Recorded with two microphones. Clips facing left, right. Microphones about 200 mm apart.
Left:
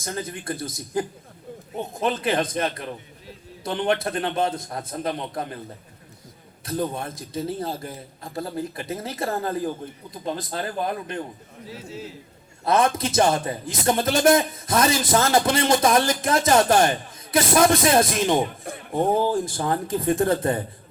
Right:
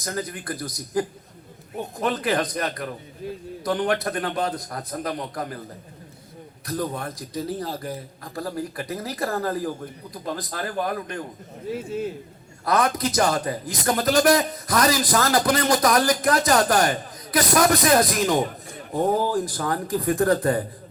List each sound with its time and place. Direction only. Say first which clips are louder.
0.0 s a man's voice: right 1 dB; 25° left (ahead or behind)
6.7 s a man's voice: left 1 dB; 25° left (ahead or behind)
11.9 s speech: right 7 dB; 55° right (ahead or behind)
12.6 s a man's voice: left 1 dB; 25° left (ahead or behind)